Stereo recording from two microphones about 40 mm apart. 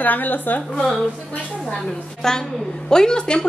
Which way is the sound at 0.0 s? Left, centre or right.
Left.